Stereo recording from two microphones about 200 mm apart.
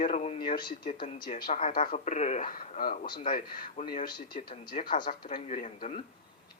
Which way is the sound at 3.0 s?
20° left (ahead or behind).